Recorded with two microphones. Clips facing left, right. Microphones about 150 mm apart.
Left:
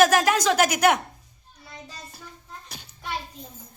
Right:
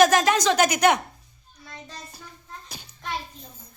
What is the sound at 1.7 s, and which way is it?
Child singing, 10° left (ahead or behind).